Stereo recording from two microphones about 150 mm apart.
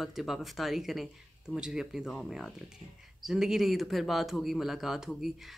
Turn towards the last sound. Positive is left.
turn(degrees=-5)  # may be behind; listen again after turning